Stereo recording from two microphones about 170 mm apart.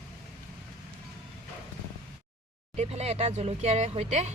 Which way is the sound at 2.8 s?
40° right (ahead or behind).